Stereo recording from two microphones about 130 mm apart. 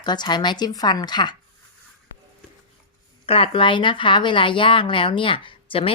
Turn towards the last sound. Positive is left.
turn(degrees=45)  # may be behind; listen again after turning